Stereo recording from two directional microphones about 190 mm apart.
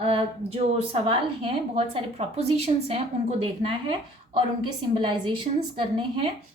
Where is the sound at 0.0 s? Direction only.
30° right (ahead or behind).